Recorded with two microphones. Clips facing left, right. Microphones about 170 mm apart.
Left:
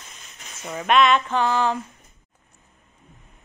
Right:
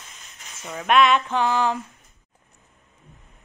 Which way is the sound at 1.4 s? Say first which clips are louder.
Even; 15° right (ahead or behind).